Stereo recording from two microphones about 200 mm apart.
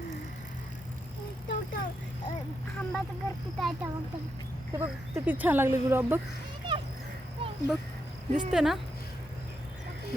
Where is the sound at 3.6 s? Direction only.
Centre (ahead or behind).